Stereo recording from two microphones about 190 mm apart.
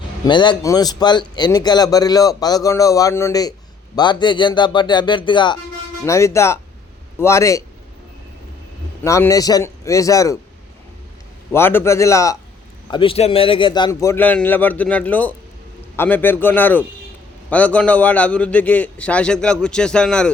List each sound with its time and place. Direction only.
0.3 s a man's voice: 25° left (ahead or behind)
9.0 s a man's voice: 15° left (ahead or behind)
11.5 s a man's voice: 10° left (ahead or behind)
12.9 s a man's voice: 25° left (ahead or behind); by 20.3 s 5° left (ahead or behind)